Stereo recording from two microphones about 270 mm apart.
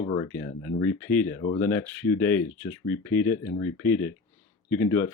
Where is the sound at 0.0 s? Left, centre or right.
Centre.